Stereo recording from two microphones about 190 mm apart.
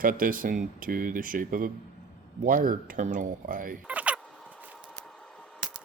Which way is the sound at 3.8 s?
5° right (ahead or behind).